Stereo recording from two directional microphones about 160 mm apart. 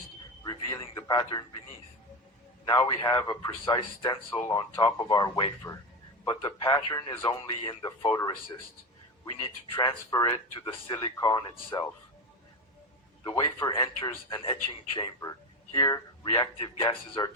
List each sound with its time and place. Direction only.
0.9 s a man's voice: 25° left (ahead or behind)
2.6 s a man's voice: 25° left (ahead or behind)
4.3 s speech: 10° left (ahead or behind)
4.5 s a man's voice: 25° left (ahead or behind)
9.7 s a man's voice: 25° left (ahead or behind)
13.2 s a man's voice: 25° left (ahead or behind)